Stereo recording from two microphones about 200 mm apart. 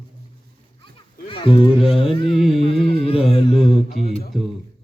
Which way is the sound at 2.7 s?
30° left (ahead or behind).